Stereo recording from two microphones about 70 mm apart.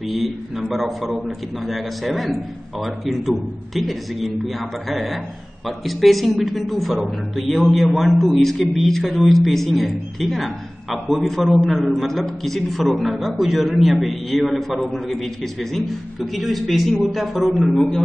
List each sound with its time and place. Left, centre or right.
0.1 s speech: centre